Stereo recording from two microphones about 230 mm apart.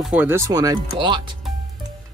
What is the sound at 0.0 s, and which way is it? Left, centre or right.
Speech, centre.